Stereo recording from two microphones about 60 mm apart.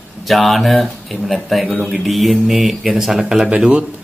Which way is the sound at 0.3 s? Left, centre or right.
Centre.